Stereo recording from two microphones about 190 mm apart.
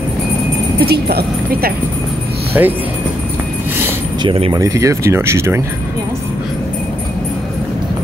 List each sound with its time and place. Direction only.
0.7 s speech: 55° right (ahead or behind)
2.5 s speech: 10° right (ahead or behind)
4.2 s speech: 25° right (ahead or behind)